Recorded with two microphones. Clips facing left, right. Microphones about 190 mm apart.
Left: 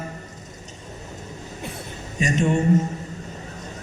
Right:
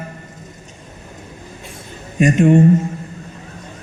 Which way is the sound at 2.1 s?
60° right (ahead or behind).